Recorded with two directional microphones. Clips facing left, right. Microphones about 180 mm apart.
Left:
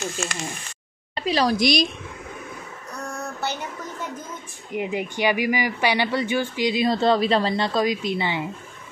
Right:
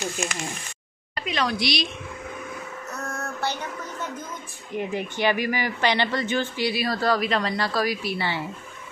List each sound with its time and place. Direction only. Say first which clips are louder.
0.2 s speech: even; 15° right (ahead or behind)
1.1 s speech: left 5 dB; 35° left (ahead or behind)
3.0 s female singing: left 2 dB; 15° left (ahead or behind)
4.7 s speech: left 2 dB; 15° left (ahead or behind)